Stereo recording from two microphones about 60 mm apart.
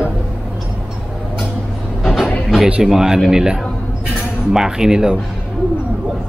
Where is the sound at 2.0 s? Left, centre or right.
Centre.